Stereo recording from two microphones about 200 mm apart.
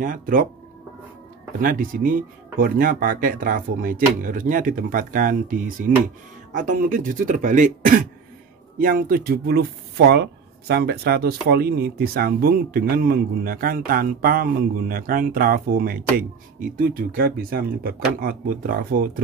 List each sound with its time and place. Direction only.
0.0 s speech: 40° right (ahead or behind)
1.6 s speech: 45° right (ahead or behind)